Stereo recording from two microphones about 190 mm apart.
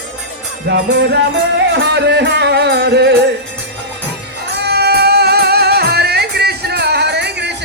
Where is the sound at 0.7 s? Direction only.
60° right (ahead or behind).